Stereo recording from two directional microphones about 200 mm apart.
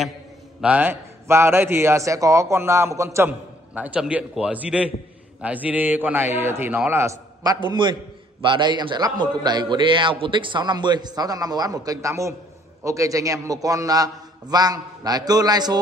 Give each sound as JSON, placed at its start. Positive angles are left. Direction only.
{"t": 0.6, "sound": "a man's voice", "side_deg": -5}